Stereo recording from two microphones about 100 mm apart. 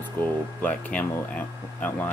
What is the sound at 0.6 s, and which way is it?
Speech, 15° left (ahead or behind).